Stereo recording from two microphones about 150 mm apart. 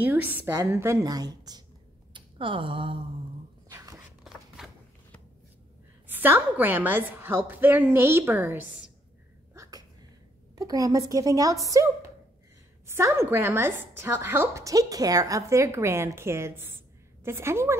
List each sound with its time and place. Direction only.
0.0 s a woman's voice: 10° right (ahead or behind)
2.1 s a sound: 35° right (ahead or behind)
3.6 s a sound: 20° right (ahead or behind)
4.6 s shuffling cards: 5° right (ahead or behind)
6.0 s a woman's voice: 15° right (ahead or behind)
9.5 s sneeze: 25° right (ahead or behind)
10.5 s a woman's voice: 25° right (ahead or behind)